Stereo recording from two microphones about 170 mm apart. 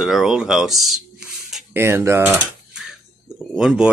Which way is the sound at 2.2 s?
Centre (ahead or behind).